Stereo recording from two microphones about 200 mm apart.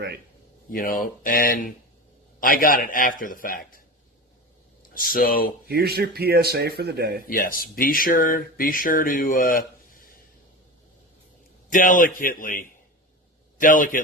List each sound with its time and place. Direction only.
0.7 s speech: 45° left (ahead or behind)
4.9 s speech: 45° left (ahead or behind)
5.6 s speech: 50° right (ahead or behind)
7.3 s speech: 45° left (ahead or behind)
11.7 s speech: 40° left (ahead or behind)